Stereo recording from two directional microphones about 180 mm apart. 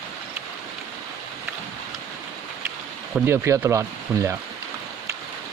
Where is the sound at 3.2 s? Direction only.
15° right (ahead or behind).